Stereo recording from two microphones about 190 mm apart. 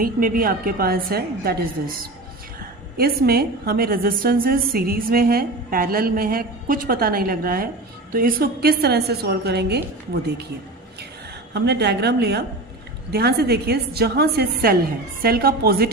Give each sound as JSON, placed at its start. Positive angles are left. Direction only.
{"t": 0.0, "sound": "a woman's voice", "side_deg": -50}
{"t": 3.0, "sound": "a woman's voice", "side_deg": -55}
{"t": 11.5, "sound": "a woman's voice", "side_deg": -60}